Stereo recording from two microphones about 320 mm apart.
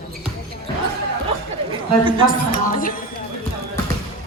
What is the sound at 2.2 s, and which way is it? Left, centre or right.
Speech, left.